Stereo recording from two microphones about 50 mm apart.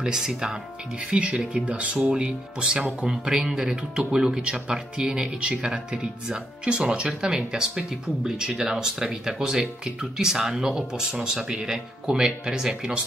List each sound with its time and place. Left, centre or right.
0.0 s speech: centre